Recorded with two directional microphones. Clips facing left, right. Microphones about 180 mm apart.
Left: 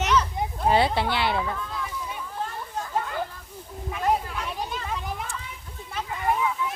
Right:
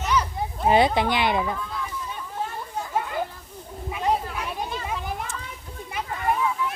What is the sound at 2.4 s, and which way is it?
Children playing, 10° right (ahead or behind).